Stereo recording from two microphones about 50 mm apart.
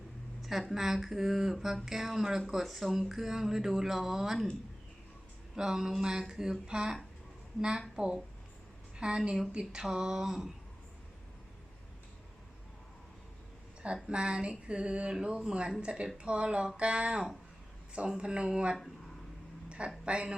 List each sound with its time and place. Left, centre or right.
0.4 s speech: centre
5.5 s speech: centre
7.9 s a woman's voice: centre
9.5 s a sound: centre
9.8 s speech: centre
13.8 s a sound: right